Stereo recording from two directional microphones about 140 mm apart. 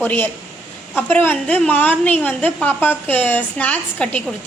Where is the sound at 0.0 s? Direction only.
15° left (ahead or behind).